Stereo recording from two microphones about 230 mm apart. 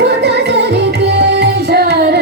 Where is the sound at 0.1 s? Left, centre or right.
Right.